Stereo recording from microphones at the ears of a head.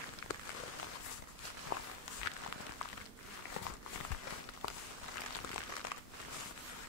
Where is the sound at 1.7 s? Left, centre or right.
Left.